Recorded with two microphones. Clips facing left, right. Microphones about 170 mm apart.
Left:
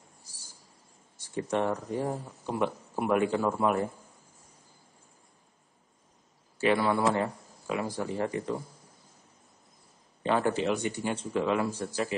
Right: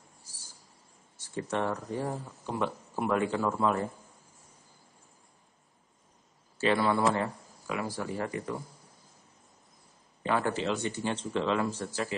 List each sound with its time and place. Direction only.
0.2 s a sound: 15° left (ahead or behind)
1.1 s speech: 15° left (ahead or behind)
6.6 s speech: 15° left (ahead or behind)
10.2 s speech: 20° left (ahead or behind)